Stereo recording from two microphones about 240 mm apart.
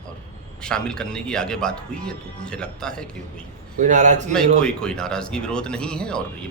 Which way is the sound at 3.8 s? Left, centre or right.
Right.